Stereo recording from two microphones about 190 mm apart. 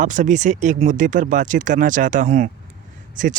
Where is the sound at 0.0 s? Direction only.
40° right (ahead or behind).